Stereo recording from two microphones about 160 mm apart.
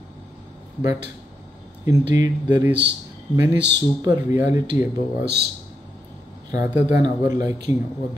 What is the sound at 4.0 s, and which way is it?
Speech, 25° right (ahead or behind).